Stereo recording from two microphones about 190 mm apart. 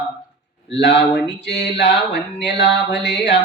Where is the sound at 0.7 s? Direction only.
65° left (ahead or behind).